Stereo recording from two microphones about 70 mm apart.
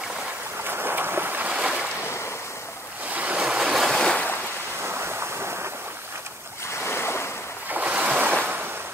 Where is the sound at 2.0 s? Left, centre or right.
Left.